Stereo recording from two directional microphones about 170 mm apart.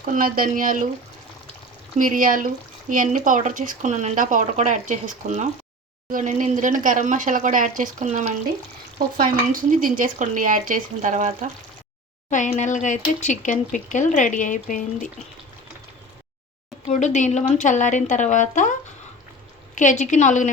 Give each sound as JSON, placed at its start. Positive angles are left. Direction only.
{"t": 0.1, "sound": "speech", "side_deg": -55}
{"t": 2.0, "sound": "speech", "side_deg": -50}
{"t": 12.3, "sound": "speech", "side_deg": 45}
{"t": 16.8, "sound": "speech", "side_deg": 45}